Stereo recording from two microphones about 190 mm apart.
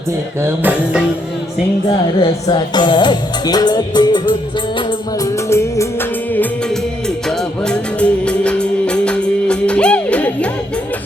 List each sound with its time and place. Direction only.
0.4 s music: 10° right (ahead or behind)
2.2 s music: 25° left (ahead or behind)
7.3 s music: 5° left (ahead or behind)